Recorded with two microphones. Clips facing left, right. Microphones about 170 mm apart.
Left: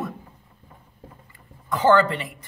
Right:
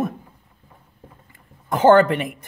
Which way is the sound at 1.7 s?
50° right (ahead or behind).